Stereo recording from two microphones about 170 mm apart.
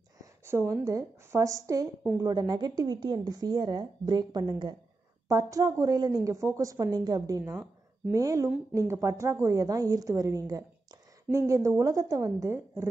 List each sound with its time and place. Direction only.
0.2 s a woman's voice: 15° right (ahead or behind)